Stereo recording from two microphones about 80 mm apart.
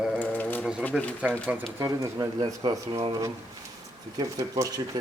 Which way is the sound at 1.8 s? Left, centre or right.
Right.